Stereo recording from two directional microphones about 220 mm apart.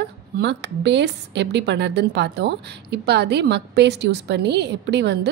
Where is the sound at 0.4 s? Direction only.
50° right (ahead or behind).